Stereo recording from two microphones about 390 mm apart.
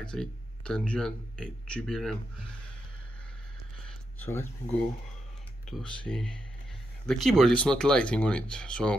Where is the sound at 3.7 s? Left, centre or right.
Centre.